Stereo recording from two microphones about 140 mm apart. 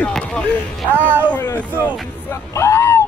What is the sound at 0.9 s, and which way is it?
Speech, 15° right (ahead or behind).